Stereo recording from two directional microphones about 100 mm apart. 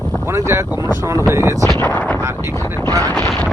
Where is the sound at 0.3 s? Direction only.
25° right (ahead or behind).